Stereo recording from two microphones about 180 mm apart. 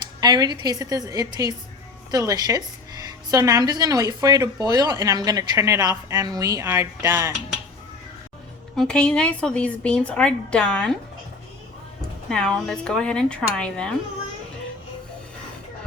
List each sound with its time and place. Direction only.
0.2 s a woman's voice: 20° right (ahead or behind)
8.7 s a woman's voice: 5° left (ahead or behind)
12.3 s a woman's voice: 5° left (ahead or behind)